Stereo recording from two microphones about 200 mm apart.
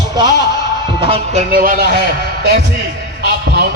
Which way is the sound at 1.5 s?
45° right (ahead or behind).